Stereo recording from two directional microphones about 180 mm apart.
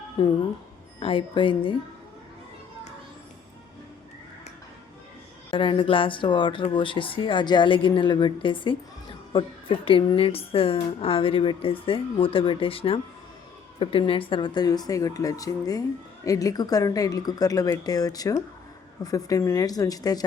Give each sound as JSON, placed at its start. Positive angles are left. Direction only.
{"t": 0.2, "sound": "a woman's voice", "side_deg": 25}
{"t": 5.5, "sound": "a woman's voice", "side_deg": 30}